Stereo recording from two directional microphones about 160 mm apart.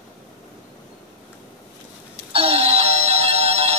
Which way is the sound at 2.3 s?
40° right (ahead or behind).